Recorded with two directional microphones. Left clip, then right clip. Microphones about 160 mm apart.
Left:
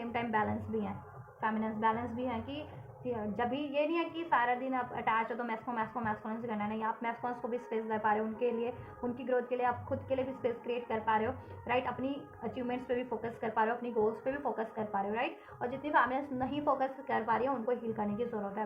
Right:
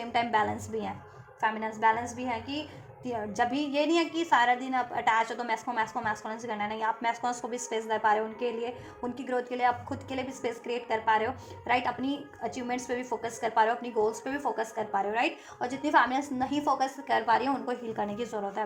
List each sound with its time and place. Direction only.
0.1 s a woman's voice: 40° right (ahead or behind)
15.1 s a woman's voice: 45° right (ahead or behind); by 16.9 s 30° right (ahead or behind)
17.1 s a woman's voice: 45° right (ahead or behind)